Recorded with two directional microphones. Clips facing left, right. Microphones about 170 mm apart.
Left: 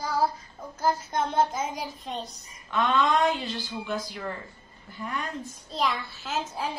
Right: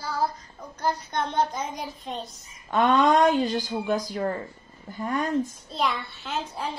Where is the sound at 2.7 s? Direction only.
45° right (ahead or behind).